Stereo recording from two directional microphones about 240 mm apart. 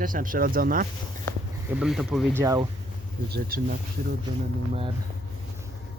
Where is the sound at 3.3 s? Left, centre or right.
Right.